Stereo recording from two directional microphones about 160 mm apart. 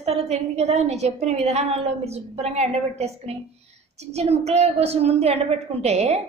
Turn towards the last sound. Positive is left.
turn(degrees=-40)  # may be behind; listen again after turning